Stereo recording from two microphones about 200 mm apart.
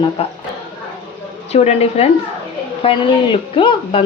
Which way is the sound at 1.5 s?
30° left (ahead or behind).